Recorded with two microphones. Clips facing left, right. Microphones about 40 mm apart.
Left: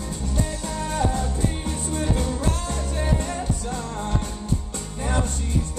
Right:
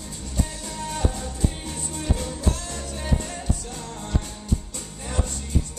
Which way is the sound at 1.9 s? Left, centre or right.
Left.